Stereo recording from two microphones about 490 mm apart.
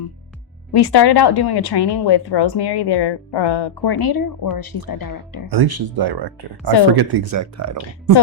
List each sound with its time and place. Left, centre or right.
0.7 s speech: left
5.5 s speech: right
7.3 s speech: right